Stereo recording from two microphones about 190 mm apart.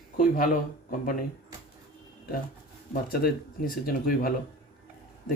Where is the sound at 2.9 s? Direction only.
50° left (ahead or behind).